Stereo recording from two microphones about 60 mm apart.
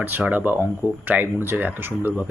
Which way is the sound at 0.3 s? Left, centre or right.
Right.